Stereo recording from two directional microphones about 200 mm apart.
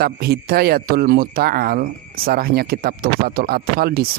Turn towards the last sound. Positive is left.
turn(degrees=-50)  # may be behind; listen again after turning